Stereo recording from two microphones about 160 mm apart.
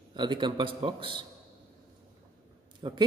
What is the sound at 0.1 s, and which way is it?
A man's voice, 30° right (ahead or behind).